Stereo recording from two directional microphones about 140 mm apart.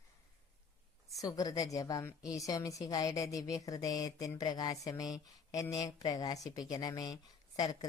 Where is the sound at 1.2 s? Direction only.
25° left (ahead or behind).